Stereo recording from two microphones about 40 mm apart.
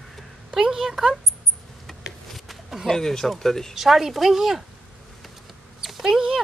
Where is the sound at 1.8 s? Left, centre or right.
Centre.